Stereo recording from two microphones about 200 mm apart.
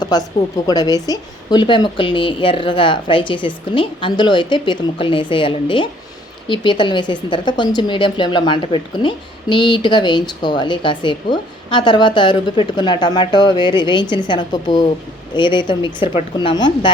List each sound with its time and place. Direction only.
0.0 s speech: 20° left (ahead or behind)